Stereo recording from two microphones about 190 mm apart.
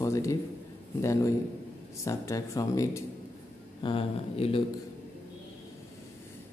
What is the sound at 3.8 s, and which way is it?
Speech, 30° left (ahead or behind).